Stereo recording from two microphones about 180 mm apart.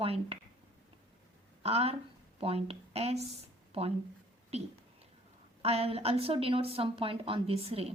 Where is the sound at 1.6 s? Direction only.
35° right (ahead or behind).